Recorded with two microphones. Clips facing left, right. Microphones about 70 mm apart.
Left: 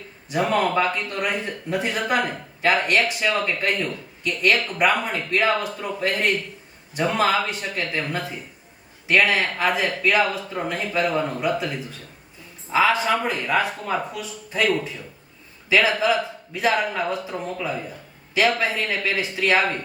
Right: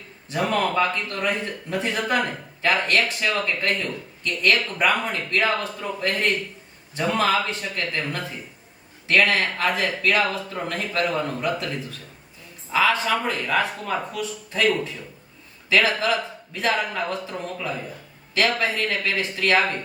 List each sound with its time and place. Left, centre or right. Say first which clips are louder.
0.3 s speech: left 2 dB; centre